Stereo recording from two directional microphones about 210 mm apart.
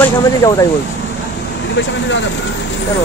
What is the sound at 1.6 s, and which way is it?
Speech, 60° left (ahead or behind).